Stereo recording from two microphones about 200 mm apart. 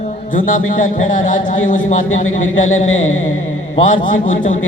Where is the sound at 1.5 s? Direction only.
40° left (ahead or behind).